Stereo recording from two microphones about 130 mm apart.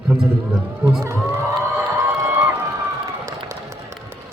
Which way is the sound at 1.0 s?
25° right (ahead or behind).